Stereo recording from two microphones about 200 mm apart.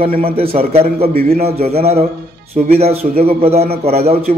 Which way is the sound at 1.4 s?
30° right (ahead or behind).